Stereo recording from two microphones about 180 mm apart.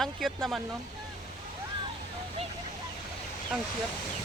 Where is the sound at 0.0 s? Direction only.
Centre (ahead or behind).